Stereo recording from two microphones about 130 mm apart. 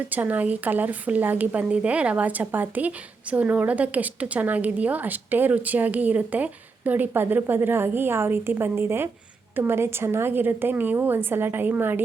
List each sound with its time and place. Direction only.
0.1 s a woman's voice: 15° right (ahead or behind)